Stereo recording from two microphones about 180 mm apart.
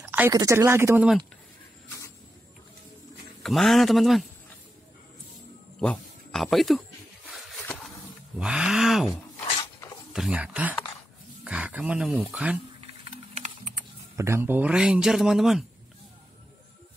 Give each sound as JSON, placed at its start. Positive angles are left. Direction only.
{"t": 0.0, "sound": "a sound", "side_deg": -10}
{"t": 0.3, "sound": "speech", "side_deg": -20}
{"t": 3.4, "sound": "speech", "side_deg": 0}
{"t": 5.8, "sound": "speech", "side_deg": 5}
{"t": 7.6, "sound": "a sound", "side_deg": 10}
{"t": 8.4, "sound": "speech", "side_deg": -5}
{"t": 9.6, "sound": "dog", "side_deg": 20}
{"t": 10.1, "sound": "speech", "side_deg": -5}
{"t": 13.0, "sound": "typing", "side_deg": -35}
{"t": 14.1, "sound": "speech", "side_deg": -15}